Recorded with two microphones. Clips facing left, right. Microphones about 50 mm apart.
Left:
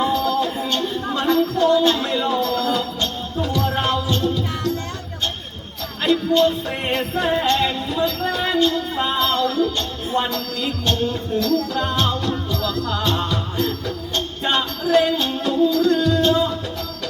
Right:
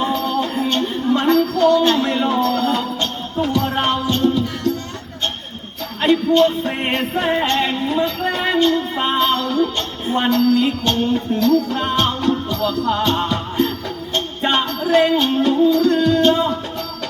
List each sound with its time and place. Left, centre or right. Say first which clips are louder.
0.0 s music: even; right
6.0 s jingle bell: right 3 dB; right
7.5 s a sound: right 2 dB; right
9.0 s music: right 2 dB; right